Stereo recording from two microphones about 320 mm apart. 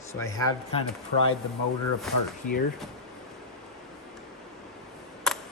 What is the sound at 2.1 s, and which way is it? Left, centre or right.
Speech, centre.